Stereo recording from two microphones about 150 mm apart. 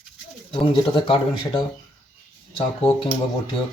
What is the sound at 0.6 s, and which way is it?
Speech, 35° left (ahead or behind).